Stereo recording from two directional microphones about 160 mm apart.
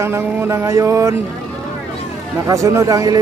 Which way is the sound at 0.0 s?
15° right (ahead or behind).